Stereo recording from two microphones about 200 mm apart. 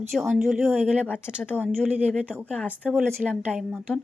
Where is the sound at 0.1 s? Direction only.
Centre (ahead or behind).